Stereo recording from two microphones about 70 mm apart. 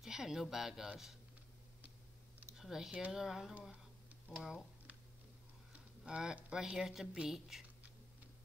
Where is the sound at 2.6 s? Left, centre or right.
Centre.